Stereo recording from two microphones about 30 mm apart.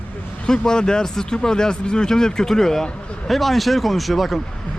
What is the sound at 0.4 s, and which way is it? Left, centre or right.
Speech, left.